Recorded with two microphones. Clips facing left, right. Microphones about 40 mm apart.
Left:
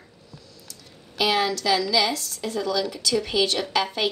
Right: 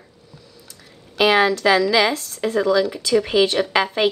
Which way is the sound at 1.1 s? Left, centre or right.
Right.